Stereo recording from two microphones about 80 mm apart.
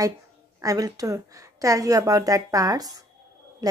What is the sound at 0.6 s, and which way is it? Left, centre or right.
A woman's voice, right.